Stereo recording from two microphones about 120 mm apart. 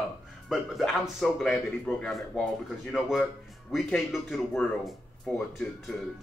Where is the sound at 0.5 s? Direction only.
Centre (ahead or behind).